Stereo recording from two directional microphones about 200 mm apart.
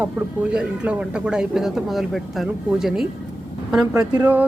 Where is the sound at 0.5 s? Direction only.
5° right (ahead or behind).